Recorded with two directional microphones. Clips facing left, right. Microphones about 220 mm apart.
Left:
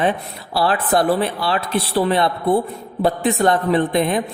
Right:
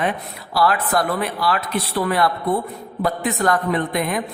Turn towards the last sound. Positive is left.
turn(degrees=25)  # may be behind; listen again after turning